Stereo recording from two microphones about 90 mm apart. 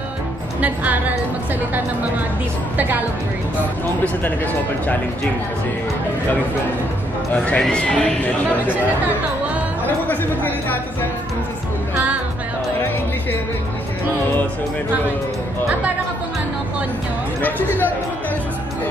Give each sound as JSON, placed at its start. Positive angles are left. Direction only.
{"t": 0.6, "sound": "a woman's voice", "side_deg": -15}
{"t": 7.3, "sound": "a man's voice", "side_deg": 10}
{"t": 9.8, "sound": "speech", "side_deg": 20}
{"t": 17.4, "sound": "speech", "side_deg": 20}